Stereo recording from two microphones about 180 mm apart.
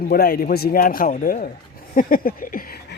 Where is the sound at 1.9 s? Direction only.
50° left (ahead or behind).